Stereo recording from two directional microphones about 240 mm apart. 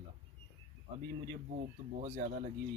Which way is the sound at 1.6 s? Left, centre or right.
Right.